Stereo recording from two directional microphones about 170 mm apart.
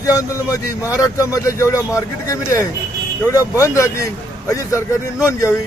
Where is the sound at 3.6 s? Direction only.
15° left (ahead or behind).